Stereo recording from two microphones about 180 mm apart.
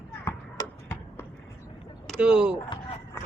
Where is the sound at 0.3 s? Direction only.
15° left (ahead or behind).